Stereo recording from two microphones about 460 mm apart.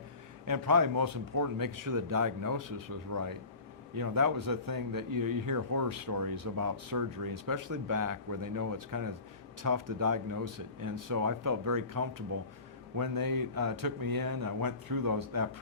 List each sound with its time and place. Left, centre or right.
0.4 s a man's voice: right